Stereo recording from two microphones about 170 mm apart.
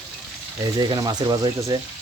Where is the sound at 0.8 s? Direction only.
25° right (ahead or behind).